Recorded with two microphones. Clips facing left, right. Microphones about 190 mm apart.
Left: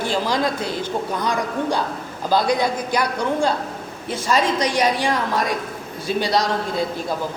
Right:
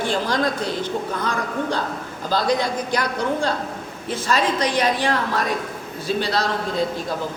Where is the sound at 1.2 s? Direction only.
15° left (ahead or behind).